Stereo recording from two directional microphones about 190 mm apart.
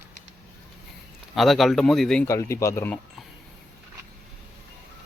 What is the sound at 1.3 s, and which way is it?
Speech, centre (ahead or behind).